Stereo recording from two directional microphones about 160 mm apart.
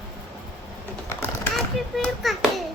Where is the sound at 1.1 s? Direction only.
15° left (ahead or behind).